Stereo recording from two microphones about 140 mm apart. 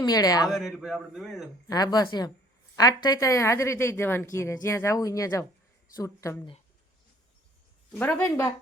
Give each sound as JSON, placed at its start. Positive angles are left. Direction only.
{"t": 0.0, "sound": "a woman's voice", "side_deg": 25}
{"t": 0.4, "sound": "speech", "side_deg": 0}
{"t": 1.6, "sound": "a woman's voice", "side_deg": 25}
{"t": 7.9, "sound": "speech", "side_deg": 15}